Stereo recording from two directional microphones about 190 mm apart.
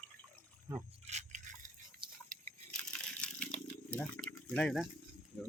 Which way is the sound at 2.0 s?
25° right (ahead or behind).